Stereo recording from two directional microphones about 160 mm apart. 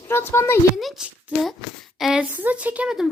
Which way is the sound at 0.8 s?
Centre (ahead or behind).